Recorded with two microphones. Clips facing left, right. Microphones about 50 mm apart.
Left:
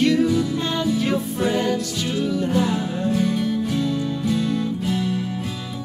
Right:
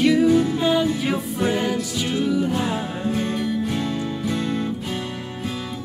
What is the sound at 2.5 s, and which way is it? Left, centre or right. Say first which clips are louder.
Music: left 3 dB; right.